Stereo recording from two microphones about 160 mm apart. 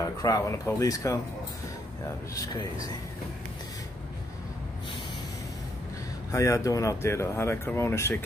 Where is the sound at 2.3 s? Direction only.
20° left (ahead or behind).